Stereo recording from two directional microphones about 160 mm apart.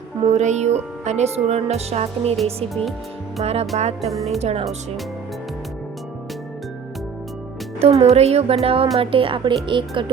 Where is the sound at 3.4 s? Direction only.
40° right (ahead or behind).